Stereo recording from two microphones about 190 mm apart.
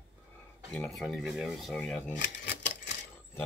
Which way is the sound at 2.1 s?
70° left (ahead or behind).